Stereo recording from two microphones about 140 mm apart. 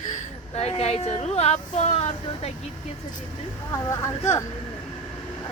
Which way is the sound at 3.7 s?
25° left (ahead or behind).